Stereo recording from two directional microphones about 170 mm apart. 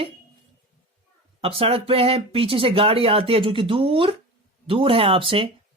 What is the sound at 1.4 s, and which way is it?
Speech, 35° right (ahead or behind).